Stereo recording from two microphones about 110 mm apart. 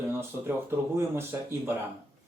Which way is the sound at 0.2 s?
20° right (ahead or behind).